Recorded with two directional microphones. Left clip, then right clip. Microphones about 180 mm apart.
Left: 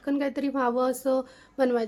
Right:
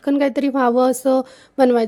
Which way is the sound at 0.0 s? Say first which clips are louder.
Right 10 dB; 45° right (ahead or behind).